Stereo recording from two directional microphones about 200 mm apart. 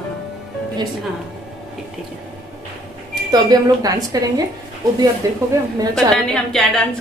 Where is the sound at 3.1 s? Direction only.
20° right (ahead or behind).